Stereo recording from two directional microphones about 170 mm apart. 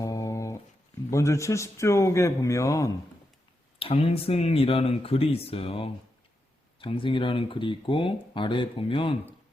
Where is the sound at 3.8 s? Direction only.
35° left (ahead or behind).